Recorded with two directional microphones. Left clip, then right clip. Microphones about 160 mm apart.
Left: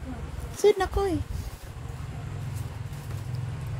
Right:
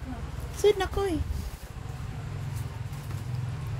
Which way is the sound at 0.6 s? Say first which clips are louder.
Left 2 dB; 20° left (ahead or behind).